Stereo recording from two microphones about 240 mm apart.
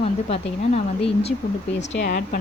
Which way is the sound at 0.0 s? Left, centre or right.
Left.